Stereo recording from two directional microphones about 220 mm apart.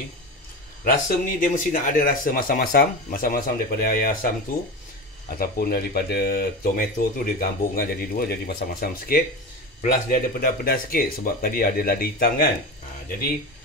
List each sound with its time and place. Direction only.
1.0 s speech: 35° left (ahead or behind)
5.3 s speech: 45° left (ahead or behind)